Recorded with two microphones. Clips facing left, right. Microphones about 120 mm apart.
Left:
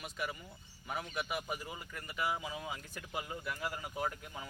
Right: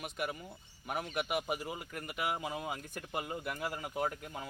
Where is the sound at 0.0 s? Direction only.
55° right (ahead or behind).